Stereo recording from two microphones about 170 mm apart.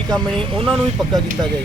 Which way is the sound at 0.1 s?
5° left (ahead or behind).